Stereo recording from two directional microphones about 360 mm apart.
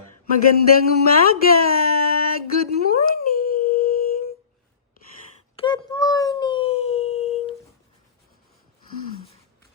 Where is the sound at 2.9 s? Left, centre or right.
Left.